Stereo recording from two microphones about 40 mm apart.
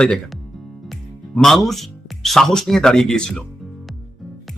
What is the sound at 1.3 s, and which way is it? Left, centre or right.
Speech, centre.